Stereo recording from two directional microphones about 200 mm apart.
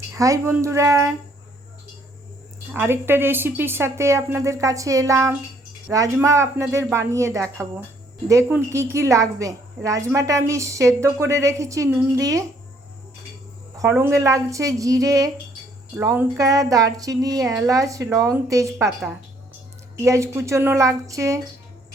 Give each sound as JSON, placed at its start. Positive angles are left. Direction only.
{"t": 0.1, "sound": "a woman's voice", "side_deg": -15}
{"t": 2.7, "sound": "a woman's voice", "side_deg": -10}
{"t": 13.7, "sound": "a woman's voice", "side_deg": -15}